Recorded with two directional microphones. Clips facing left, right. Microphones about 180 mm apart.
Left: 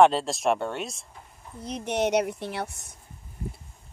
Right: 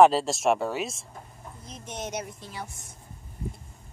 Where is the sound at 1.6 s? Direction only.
70° left (ahead or behind).